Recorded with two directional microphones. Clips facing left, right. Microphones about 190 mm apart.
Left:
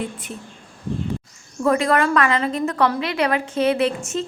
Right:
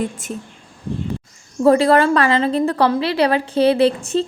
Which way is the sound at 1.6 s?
30° right (ahead or behind).